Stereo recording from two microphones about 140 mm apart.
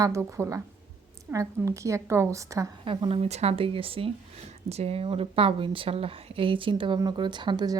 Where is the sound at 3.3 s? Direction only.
50° right (ahead or behind).